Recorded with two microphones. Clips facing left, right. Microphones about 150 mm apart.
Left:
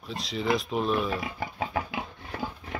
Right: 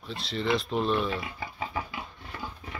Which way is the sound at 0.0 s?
Centre (ahead or behind).